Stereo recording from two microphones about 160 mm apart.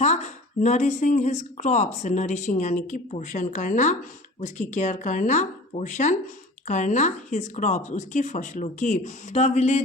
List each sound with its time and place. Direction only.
0.0 s speech: 45° left (ahead or behind)